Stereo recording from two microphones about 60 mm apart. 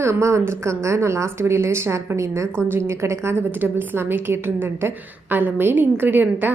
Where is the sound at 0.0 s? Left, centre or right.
Right.